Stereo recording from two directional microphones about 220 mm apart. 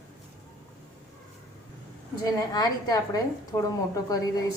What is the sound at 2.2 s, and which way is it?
A woman's voice, 20° left (ahead or behind).